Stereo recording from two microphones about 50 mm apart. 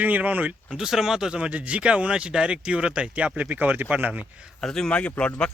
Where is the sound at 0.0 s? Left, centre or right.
Right.